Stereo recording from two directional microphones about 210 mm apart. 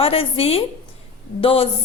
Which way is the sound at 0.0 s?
25° left (ahead or behind).